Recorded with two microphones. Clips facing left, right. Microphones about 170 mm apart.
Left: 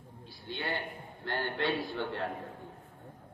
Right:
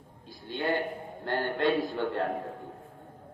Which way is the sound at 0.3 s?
45° right (ahead or behind).